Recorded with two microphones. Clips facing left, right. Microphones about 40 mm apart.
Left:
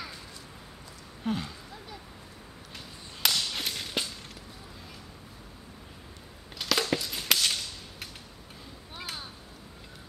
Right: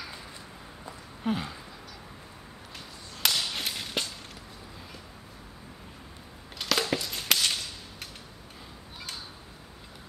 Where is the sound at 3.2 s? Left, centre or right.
Centre.